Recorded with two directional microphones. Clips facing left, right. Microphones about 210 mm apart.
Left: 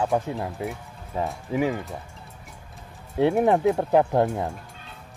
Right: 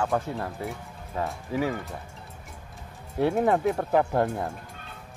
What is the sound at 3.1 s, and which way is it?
Speech, 15° left (ahead or behind).